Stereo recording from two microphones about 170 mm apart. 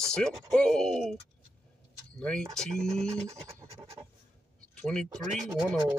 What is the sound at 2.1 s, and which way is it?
Speech, 5° left (ahead or behind).